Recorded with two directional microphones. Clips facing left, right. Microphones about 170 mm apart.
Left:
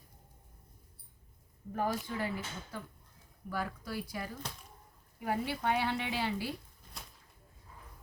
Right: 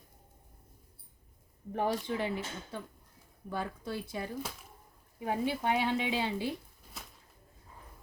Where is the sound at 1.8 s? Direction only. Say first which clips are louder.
Right 3 dB; 25° right (ahead or behind).